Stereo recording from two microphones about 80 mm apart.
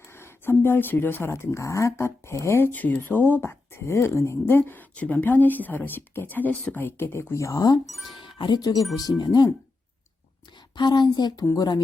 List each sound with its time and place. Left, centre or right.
0.1 s speech: left
2.7 s speech: left
6.7 s speech: left
8.4 s speech: left
10.8 s speech: left